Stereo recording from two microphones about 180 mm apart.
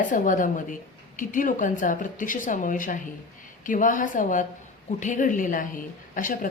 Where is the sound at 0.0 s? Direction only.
45° left (ahead or behind).